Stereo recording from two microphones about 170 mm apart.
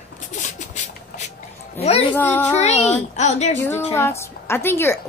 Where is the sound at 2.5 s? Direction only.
40° left (ahead or behind).